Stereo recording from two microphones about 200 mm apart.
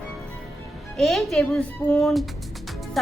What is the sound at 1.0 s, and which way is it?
Speech, centre (ahead or behind).